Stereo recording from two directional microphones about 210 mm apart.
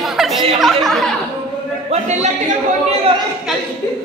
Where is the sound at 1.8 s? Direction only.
30° right (ahead or behind).